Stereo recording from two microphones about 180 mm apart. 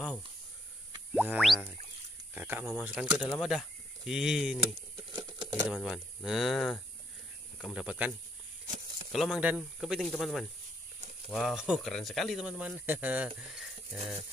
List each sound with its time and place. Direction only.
1.1 s speech: 5° right (ahead or behind)
5.1 s a sound: 20° right (ahead or behind)
5.7 s speech: centre (ahead or behind)
9.1 s speech: centre (ahead or behind)